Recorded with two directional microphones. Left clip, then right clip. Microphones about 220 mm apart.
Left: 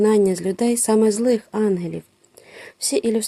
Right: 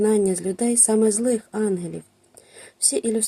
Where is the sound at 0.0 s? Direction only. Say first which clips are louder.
Left 3 dB; 25° left (ahead or behind).